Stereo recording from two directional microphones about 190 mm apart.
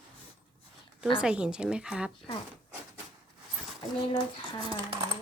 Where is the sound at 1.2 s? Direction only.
5° right (ahead or behind).